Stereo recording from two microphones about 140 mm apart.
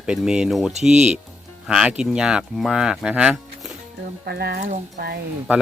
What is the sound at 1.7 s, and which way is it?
Speech, 5° right (ahead or behind).